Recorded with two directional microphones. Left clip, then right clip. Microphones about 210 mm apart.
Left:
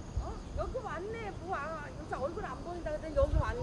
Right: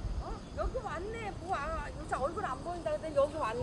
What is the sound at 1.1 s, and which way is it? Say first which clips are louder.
Speech: right 2 dB; 20° right (ahead or behind).